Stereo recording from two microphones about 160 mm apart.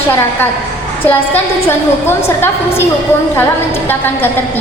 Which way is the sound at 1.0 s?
15° left (ahead or behind).